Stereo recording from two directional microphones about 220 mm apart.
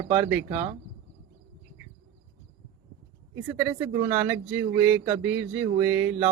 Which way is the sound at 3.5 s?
5° right (ahead or behind).